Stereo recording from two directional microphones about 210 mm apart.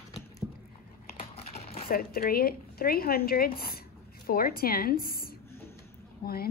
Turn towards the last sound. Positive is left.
turn(degrees=45)  # may be behind; listen again after turning